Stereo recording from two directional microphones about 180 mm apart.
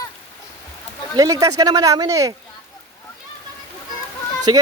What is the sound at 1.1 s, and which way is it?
A man's voice, 20° right (ahead or behind).